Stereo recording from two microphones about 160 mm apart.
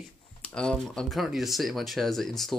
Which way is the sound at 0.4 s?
5° left (ahead or behind).